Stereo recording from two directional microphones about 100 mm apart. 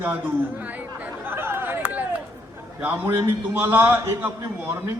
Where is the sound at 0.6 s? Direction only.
15° right (ahead or behind).